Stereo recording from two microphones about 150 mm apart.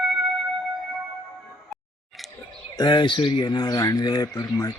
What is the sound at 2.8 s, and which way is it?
A man's voice, 30° left (ahead or behind).